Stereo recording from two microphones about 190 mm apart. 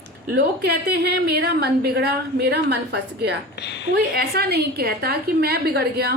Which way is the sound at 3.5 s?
65° left (ahead or behind).